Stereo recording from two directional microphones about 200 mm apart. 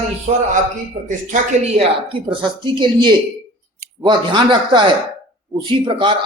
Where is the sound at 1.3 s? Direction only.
40° right (ahead or behind).